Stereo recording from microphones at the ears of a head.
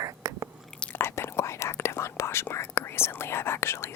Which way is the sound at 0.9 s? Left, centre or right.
Left.